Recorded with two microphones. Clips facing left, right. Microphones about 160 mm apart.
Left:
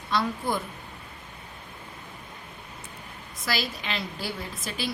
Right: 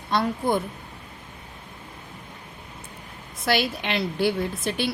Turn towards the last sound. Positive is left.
turn(degrees=-60)  # may be behind; listen again after turning